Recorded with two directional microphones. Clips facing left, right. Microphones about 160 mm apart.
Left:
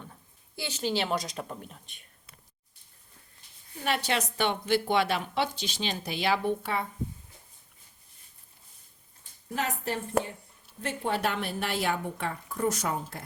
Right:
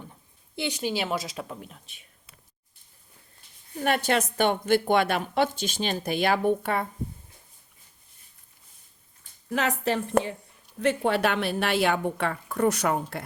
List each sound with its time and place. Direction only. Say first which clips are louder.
0.5 s a woman's voice: right 2 dB; 15° right (ahead or behind)
3.8 s a woman's voice: right 5 dB; 50° right (ahead or behind)
9.5 s a woman's voice: right 6 dB; 85° right
10.8 s speech: right 7 dB; 75° right (ahead or behind)